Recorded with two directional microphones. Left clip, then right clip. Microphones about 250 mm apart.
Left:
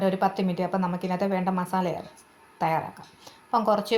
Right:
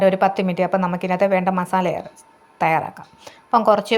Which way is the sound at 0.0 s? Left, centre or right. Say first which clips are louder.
Right 8 dB; right.